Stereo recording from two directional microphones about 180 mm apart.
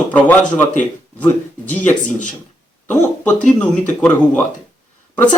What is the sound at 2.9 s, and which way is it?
Speech, 10° left (ahead or behind).